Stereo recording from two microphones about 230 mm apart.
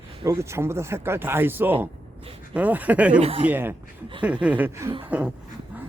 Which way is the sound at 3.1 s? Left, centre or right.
Right.